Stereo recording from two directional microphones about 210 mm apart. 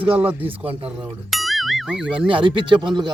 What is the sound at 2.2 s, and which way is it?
Speech, 25° right (ahead or behind).